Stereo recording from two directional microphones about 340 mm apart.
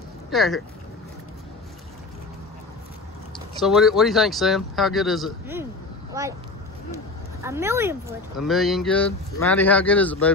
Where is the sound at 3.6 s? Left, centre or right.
Centre.